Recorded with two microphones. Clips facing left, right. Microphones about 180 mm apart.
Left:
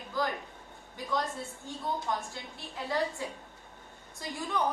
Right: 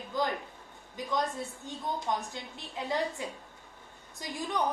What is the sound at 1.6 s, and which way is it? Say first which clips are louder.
A woman's voice: left 1 dB; 20° right (ahead or behind).